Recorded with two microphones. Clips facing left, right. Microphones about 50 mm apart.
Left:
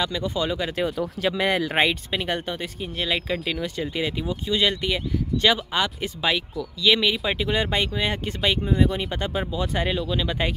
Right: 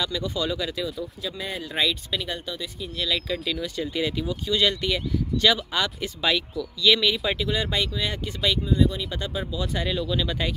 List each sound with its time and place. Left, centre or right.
0.0 s speech: left
0.9 s speech: left
1.8 s speech: left
3.0 s speech: left
8.6 s speech: left
10.0 s speech: centre